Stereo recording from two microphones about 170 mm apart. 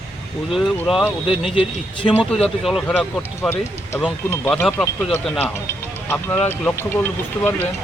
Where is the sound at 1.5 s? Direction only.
30° left (ahead or behind).